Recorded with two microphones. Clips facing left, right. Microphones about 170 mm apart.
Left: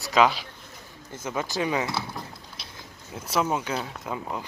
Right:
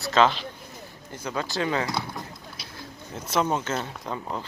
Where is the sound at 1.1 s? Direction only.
20° left (ahead or behind).